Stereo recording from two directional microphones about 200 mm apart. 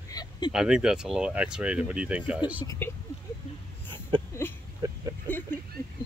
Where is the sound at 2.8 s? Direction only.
10° left (ahead or behind).